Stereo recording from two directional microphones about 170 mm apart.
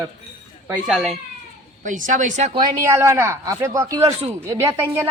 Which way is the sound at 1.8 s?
50° right (ahead or behind).